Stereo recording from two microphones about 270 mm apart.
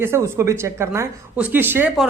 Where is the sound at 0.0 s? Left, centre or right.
Centre.